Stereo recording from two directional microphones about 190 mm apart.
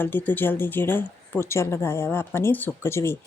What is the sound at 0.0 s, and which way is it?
A woman's voice, 10° left (ahead or behind).